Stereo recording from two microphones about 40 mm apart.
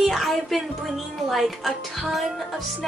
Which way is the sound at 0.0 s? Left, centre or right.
Centre.